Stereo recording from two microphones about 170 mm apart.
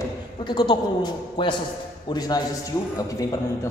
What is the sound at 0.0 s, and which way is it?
A man's voice, 25° left (ahead or behind).